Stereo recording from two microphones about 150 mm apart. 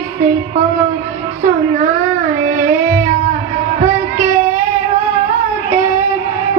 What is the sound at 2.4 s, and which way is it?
Child singing, 60° right (ahead or behind).